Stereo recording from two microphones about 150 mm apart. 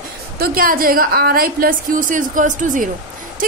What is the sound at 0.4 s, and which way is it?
A woman's voice, 70° right (ahead or behind).